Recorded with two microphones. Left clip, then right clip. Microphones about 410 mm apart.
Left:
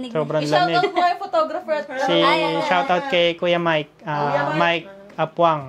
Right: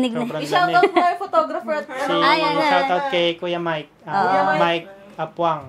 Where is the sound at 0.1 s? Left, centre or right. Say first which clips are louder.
Left 2 dB; left.